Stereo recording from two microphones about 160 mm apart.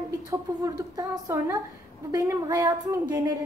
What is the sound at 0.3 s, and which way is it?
A woman's voice, 20° right (ahead or behind).